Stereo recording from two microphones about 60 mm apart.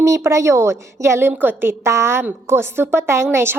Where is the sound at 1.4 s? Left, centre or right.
Right.